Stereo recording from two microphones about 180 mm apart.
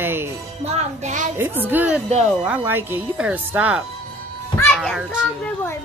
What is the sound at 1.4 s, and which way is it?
Speech, 10° right (ahead or behind).